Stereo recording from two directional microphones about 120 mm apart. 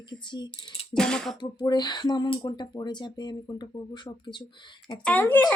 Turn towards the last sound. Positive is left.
turn(degrees=15)  # may be behind; listen again after turning